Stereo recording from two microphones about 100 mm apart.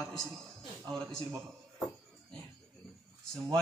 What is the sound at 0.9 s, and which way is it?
Speech, 5° left (ahead or behind).